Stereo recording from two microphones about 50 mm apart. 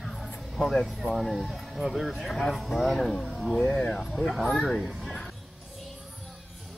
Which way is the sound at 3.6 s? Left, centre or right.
Centre.